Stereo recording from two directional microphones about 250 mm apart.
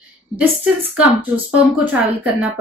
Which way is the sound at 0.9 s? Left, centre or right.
Centre.